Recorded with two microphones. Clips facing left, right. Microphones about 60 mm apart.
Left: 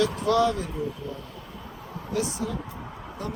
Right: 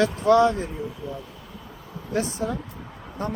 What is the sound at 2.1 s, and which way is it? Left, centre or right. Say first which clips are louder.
Speech: right 3 dB; right.